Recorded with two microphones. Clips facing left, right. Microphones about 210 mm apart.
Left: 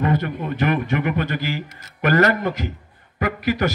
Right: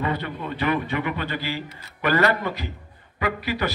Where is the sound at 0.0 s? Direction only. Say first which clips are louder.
Left 5 dB; 45° left (ahead or behind).